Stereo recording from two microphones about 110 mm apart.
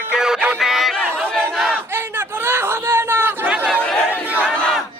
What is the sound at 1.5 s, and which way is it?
Crowd, 5° right (ahead or behind).